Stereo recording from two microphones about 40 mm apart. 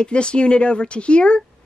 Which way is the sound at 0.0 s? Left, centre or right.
Left.